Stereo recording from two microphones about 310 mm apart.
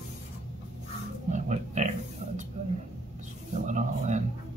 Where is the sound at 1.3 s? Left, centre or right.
Right.